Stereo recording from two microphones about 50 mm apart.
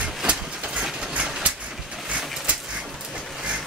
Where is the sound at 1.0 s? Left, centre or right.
Centre.